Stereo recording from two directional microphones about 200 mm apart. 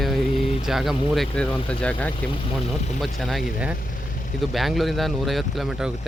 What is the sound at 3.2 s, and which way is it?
Speech, centre (ahead or behind).